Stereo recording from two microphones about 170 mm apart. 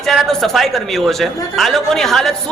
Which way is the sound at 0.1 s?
Centre (ahead or behind).